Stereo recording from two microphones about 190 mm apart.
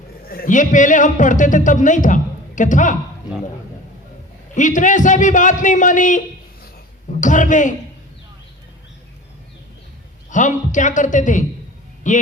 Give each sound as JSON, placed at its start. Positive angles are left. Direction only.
{"t": 0.3, "sound": "a man's voice", "side_deg": 45}
{"t": 4.5, "sound": "a man's voice", "side_deg": 40}
{"t": 10.2, "sound": "a man's voice", "side_deg": 40}